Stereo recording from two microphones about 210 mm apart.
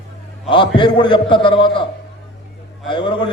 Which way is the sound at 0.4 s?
25° left (ahead or behind).